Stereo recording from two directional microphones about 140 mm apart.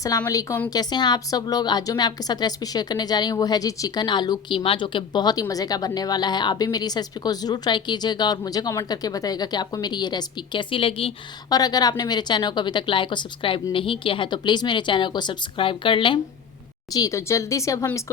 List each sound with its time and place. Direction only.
0.3 s a woman's voice: 25° left (ahead or behind)
0.7 s a woman's voice: 30° left (ahead or behind)
11.4 s a woman's voice: 30° left (ahead or behind)
16.9 s a woman's voice: 25° left (ahead or behind)